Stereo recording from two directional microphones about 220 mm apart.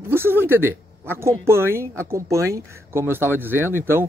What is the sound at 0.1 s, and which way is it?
A woman's voice, 10° right (ahead or behind).